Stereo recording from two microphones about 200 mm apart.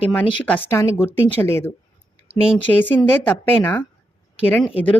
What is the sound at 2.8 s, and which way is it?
A woman's voice, 10° left (ahead or behind).